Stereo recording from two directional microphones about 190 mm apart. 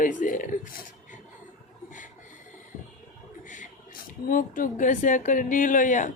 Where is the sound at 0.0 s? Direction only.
45° left (ahead or behind).